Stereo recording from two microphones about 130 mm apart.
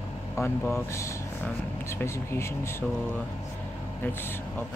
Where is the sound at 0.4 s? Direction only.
20° left (ahead or behind).